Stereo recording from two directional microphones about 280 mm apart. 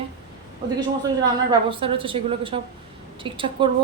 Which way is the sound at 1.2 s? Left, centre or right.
Centre.